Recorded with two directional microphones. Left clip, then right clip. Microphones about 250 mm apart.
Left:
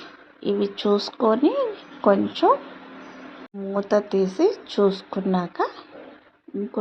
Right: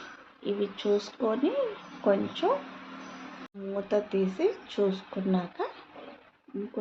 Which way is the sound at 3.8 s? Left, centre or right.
Left.